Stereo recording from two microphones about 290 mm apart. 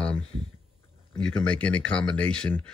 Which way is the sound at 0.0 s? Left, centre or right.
Centre.